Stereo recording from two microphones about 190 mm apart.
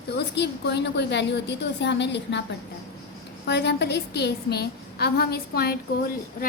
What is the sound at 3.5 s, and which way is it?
A woman's voice, 60° left (ahead or behind).